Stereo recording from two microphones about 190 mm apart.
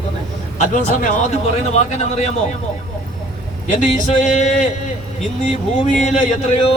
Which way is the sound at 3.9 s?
40° left (ahead or behind).